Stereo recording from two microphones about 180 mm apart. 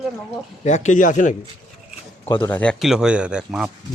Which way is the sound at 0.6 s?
40° left (ahead or behind).